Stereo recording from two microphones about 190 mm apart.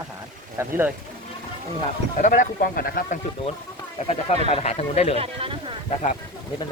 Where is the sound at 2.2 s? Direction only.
45° left (ahead or behind).